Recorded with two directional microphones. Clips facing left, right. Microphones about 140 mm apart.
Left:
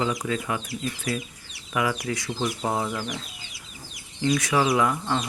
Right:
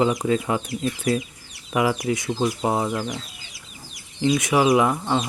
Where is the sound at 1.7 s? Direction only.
25° right (ahead or behind).